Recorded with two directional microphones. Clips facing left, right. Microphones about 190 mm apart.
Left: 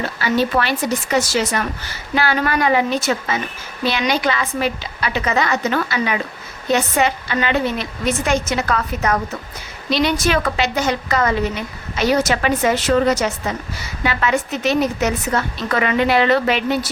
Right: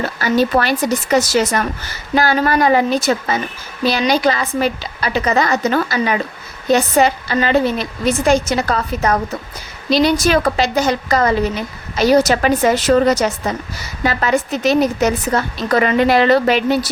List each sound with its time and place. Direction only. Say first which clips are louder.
0.2 s a woman's voice: right 3 dB; 40° right (ahead or behind)